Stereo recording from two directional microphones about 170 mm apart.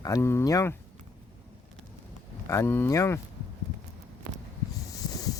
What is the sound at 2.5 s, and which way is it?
Speech, 15° left (ahead or behind).